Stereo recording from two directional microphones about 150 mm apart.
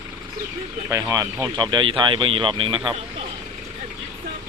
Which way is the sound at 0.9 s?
20° right (ahead or behind).